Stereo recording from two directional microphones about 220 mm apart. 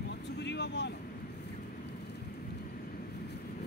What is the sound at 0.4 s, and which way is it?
Vehicle, 50° left (ahead or behind).